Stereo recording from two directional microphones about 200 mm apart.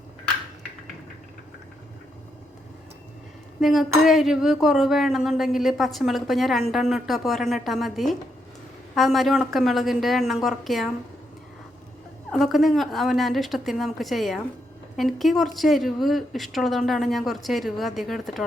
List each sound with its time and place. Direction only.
3.6 s speech: centre (ahead or behind)
12.3 s speech: centre (ahead or behind)